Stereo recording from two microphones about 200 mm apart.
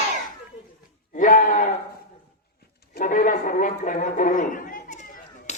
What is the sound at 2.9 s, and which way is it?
Speech, 45° left (ahead or behind).